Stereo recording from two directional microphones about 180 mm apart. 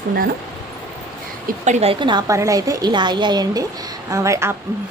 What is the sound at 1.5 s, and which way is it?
A woman's voice, 40° right (ahead or behind).